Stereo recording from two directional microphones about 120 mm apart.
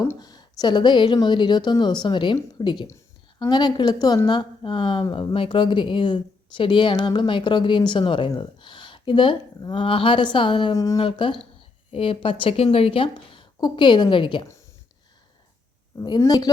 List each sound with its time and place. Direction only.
0.2 s a woman's voice: 35° left (ahead or behind)
2.9 s a woman's voice: 30° left (ahead or behind); by 10.8 s 45° left (ahead or behind)
10.8 s speech: 30° left (ahead or behind)
11.0 s speech: 45° left (ahead or behind)
16.0 s a woman's voice: 35° left (ahead or behind)